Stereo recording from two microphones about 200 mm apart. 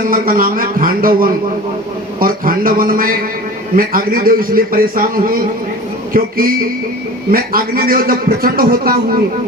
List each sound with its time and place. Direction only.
0.1 s a man's voice: 45° right (ahead or behind)